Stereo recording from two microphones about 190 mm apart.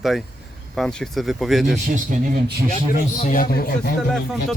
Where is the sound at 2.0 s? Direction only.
45° right (ahead or behind).